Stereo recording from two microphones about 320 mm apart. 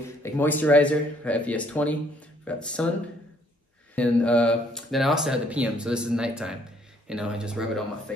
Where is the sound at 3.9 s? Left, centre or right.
Centre.